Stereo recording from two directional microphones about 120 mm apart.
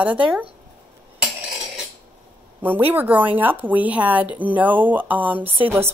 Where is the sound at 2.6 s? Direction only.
15° right (ahead or behind).